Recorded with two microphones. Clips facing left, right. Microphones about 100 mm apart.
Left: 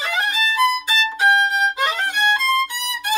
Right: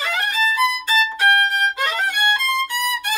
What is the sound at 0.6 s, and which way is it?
Violin, 15° left (ahead or behind).